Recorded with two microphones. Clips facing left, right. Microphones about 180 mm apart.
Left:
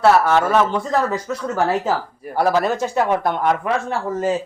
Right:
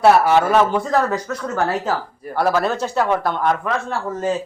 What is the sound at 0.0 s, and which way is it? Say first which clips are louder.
Speech: right 1 dB; 15° right (ahead or behind).